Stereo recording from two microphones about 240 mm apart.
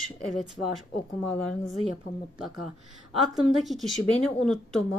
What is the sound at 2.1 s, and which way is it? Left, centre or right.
Speech, left.